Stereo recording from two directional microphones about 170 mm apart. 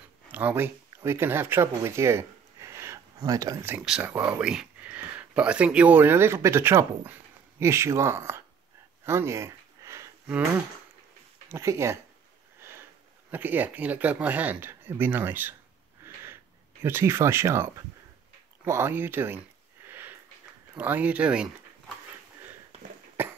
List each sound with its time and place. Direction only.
0.3 s speech: 10° right (ahead or behind)
9.0 s a sound: 15° right (ahead or behind)
11.4 s speech: 15° right (ahead or behind)
13.3 s speech: 10° right (ahead or behind)
16.8 s speech: 15° right (ahead or behind)
19.9 s sniff: 10° right (ahead or behind)
20.7 s speech: 10° right (ahead or behind)